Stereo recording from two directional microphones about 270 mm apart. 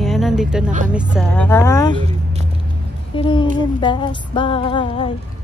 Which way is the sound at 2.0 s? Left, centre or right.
Right.